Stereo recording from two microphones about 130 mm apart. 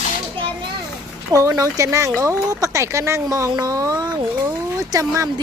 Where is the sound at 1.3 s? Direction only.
25° right (ahead or behind).